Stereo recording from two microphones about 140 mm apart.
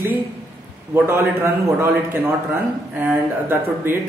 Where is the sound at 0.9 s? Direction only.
15° right (ahead or behind).